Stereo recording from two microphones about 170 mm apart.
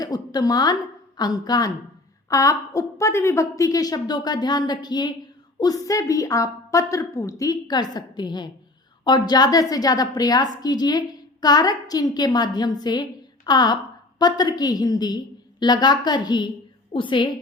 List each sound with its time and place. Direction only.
0.0 s a woman's voice: 20° left (ahead or behind)